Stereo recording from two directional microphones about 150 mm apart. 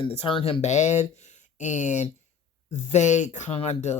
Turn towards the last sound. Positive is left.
turn(degrees=45)  # may be behind; listen again after turning